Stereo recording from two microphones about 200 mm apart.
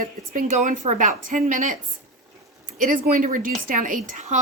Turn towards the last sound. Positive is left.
turn(degrees=-40)  # may be behind; listen again after turning